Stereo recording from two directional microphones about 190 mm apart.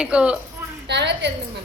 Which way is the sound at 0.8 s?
65° right (ahead or behind).